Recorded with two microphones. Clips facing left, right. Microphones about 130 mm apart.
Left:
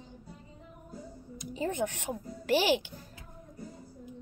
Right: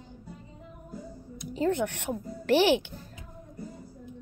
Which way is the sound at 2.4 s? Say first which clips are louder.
Right 4 dB; 55° right (ahead or behind).